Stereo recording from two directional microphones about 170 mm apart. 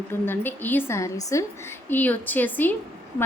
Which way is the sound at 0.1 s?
10° left (ahead or behind).